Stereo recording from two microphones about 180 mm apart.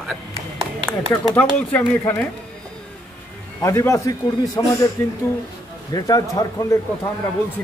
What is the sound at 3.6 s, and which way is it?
A man's voice, 15° left (ahead or behind).